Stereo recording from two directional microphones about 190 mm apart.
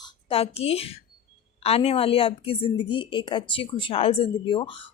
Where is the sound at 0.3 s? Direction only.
30° left (ahead or behind).